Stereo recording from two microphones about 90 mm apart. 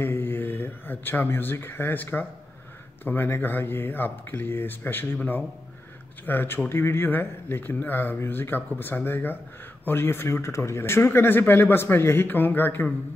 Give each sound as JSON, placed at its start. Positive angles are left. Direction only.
{"t": 0.0, "sound": "speech", "side_deg": 25}